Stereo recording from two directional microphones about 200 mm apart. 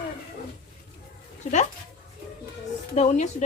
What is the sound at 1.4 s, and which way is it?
Speech, 35° left (ahead or behind).